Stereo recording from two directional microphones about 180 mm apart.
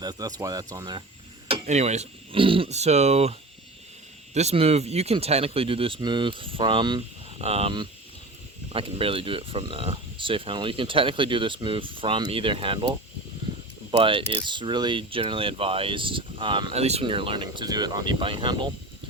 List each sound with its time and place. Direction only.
0.0 s speech: 20° right (ahead or behind)
1.6 s speech: 40° right (ahead or behind)
4.4 s speech: 35° right (ahead or behind)
14.0 s speech: 30° right (ahead or behind)